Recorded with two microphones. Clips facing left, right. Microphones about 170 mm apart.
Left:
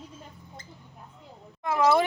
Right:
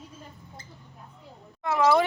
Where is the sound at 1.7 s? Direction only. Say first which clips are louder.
Right 1 dB; 15° left (ahead or behind).